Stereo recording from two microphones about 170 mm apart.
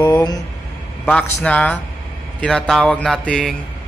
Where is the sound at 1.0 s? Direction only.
10° left (ahead or behind).